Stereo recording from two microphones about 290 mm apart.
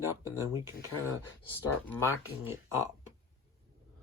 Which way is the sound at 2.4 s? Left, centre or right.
Centre.